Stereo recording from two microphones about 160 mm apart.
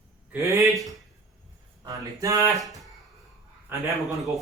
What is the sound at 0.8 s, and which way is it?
Speech, centre (ahead or behind).